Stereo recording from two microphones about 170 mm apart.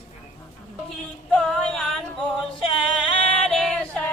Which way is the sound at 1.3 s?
5° left (ahead or behind).